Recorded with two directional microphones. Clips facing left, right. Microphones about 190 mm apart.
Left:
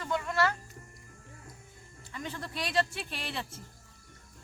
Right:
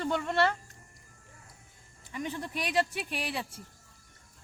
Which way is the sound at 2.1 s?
15° right (ahead or behind).